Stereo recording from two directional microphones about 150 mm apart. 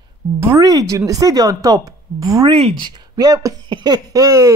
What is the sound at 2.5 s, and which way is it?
Speech, 40° right (ahead or behind).